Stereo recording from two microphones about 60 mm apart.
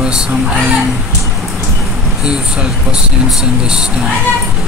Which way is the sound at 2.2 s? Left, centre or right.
Centre.